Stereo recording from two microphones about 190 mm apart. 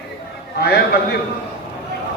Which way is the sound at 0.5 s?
60° left (ahead or behind).